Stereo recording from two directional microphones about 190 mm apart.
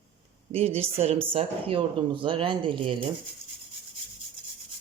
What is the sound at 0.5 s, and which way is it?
Speech, 30° right (ahead or behind).